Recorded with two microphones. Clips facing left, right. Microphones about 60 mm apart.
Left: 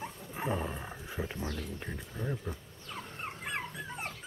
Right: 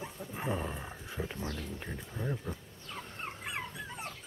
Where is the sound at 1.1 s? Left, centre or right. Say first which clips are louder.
Left 1 dB; centre.